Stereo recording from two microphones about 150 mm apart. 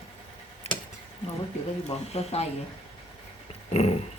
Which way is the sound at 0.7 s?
45° left (ahead or behind).